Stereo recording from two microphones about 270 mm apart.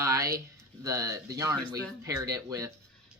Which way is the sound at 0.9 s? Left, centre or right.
Centre.